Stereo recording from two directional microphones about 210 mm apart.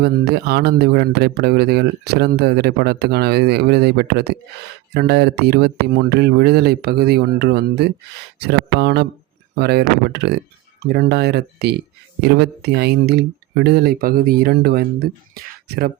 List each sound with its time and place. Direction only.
0.0 s a man's voice: 50° right (ahead or behind)